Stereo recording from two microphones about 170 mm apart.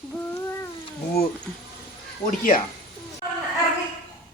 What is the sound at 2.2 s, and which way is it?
Speech, 55° left (ahead or behind).